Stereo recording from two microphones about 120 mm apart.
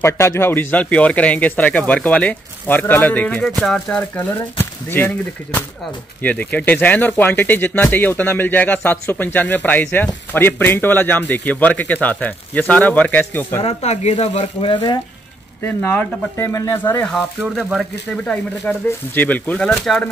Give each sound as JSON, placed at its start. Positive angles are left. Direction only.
{"t": 0.0, "sound": "speech", "side_deg": 20}
{"t": 3.4, "sound": "speech", "side_deg": 0}
{"t": 13.6, "sound": "speech", "side_deg": 60}
{"t": 15.6, "sound": "speech", "side_deg": 15}
{"t": 17.6, "sound": "speech", "side_deg": 0}